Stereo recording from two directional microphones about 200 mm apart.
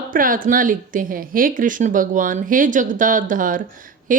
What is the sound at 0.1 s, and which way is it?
A woman's voice, 45° right (ahead or behind).